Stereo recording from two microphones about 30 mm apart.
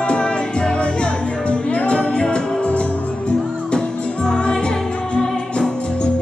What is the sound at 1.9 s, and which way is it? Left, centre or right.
Music, left.